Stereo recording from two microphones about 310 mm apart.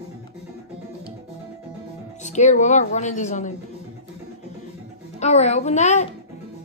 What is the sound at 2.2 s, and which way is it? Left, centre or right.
A woman's voice, left.